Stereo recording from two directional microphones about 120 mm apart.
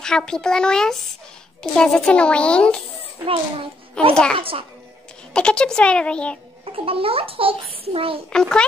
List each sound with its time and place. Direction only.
0.0 s a child's voice: 5° left (ahead or behind)
4.1 s a child's voice: 5° left (ahead or behind)
4.4 s a child's voice: 50° right (ahead or behind)
5.3 s a child's voice: 5° left (ahead or behind)
6.6 s a child's voice: 50° right (ahead or behind)
8.3 s a child's voice: 5° left (ahead or behind)